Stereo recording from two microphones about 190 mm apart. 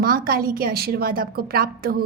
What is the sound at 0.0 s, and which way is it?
A woman's voice, 50° right (ahead or behind).